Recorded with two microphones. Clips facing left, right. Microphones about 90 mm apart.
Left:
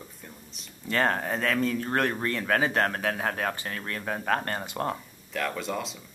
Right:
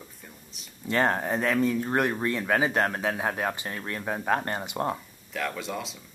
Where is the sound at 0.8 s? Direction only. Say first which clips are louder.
Right 1 dB; 20° right (ahead or behind).